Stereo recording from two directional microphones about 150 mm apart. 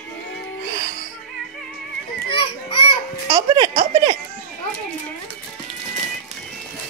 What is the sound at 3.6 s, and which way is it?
Music, 45° right (ahead or behind).